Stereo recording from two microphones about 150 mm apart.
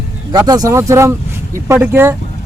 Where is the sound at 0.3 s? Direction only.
25° right (ahead or behind).